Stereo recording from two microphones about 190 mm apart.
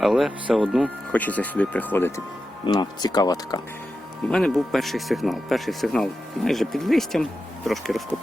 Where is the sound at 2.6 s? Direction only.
20° left (ahead or behind).